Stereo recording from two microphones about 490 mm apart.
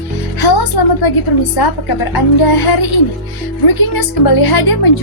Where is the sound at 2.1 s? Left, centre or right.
Left.